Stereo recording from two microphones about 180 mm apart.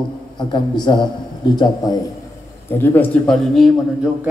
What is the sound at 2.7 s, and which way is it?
A man's voice, 10° left (ahead or behind).